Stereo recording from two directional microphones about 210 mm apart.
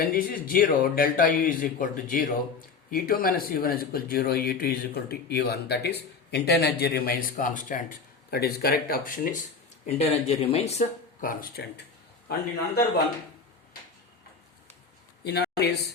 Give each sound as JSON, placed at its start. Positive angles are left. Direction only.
{"t": 0.0, "sound": "speech", "side_deg": 45}
{"t": 9.8, "sound": "speech", "side_deg": 30}
{"t": 15.2, "sound": "a sound", "side_deg": 50}